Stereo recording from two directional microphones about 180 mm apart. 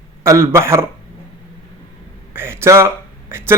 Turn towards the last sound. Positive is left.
turn(degrees=-15)  # may be behind; listen again after turning